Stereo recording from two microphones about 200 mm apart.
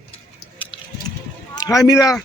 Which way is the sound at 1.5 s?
15° left (ahead or behind).